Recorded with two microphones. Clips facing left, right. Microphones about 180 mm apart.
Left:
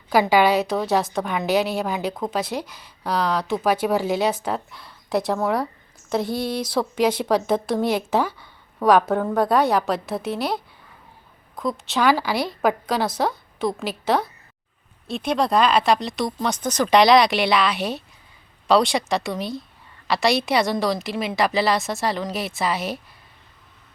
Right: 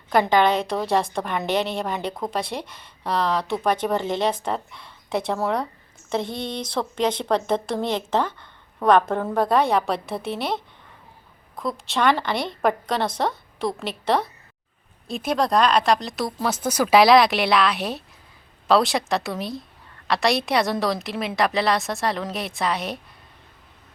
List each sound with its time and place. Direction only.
0.1 s a woman's voice: 5° left (ahead or behind)